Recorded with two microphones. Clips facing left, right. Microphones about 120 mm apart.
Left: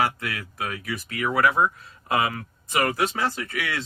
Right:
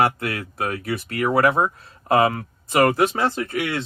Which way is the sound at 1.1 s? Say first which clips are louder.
Right 5 dB; 55° right (ahead or behind).